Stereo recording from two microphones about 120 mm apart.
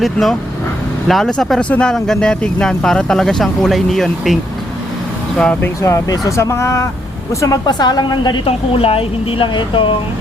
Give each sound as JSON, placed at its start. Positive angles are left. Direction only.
{"t": 0.0, "sound": "speech", "side_deg": 0}
{"t": 5.4, "sound": "speech", "side_deg": 10}
{"t": 5.8, "sound": "a woman's voice", "side_deg": 25}